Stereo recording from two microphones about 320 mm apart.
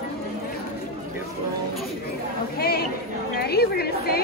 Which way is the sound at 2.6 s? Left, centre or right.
Left.